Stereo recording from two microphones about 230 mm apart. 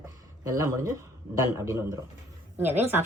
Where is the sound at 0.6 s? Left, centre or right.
Centre.